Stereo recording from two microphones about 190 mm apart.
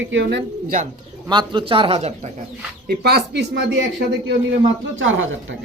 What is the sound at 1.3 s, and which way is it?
Speech, 25° right (ahead or behind).